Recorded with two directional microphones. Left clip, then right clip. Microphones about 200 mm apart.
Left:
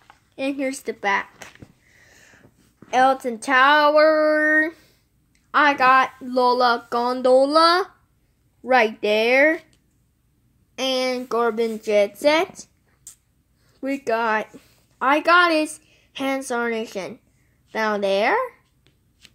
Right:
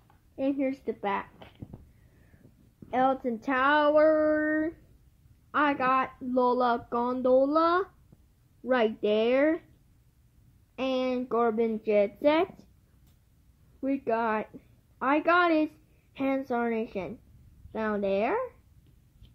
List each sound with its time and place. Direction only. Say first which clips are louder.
0.4 s a woman's voice: left 4 dB; 15° left (ahead or behind)
2.9 s a woman's voice: left 9 dB; 15° left (ahead or behind)
9.1 s a woman's voice: left 9 dB; 15° left (ahead or behind)
10.8 s a woman's voice: left 7 dB; 15° left (ahead or behind)
13.7 s a woman's voice: left 6 dB; 15° left (ahead or behind)